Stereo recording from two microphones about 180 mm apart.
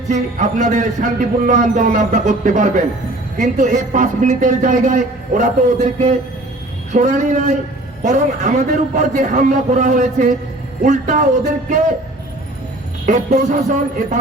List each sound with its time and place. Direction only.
0.1 s a man's voice: 45° right (ahead or behind)
13.1 s a man's voice: 45° right (ahead or behind)